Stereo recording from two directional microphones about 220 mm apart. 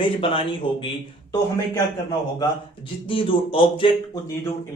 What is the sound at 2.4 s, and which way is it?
A man's voice, 25° left (ahead or behind).